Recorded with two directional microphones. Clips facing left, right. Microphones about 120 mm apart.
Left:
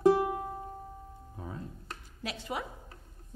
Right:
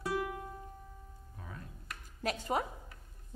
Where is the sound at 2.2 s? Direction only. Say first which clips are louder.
Right 4 dB; 45° right (ahead or behind).